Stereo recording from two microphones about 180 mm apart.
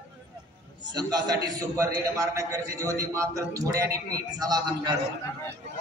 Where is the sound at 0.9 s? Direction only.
20° right (ahead or behind).